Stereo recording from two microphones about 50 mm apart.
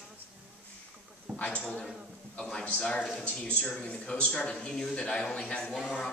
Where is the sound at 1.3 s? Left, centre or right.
Left.